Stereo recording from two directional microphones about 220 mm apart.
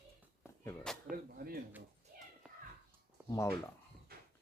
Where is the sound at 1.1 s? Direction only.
40° right (ahead or behind).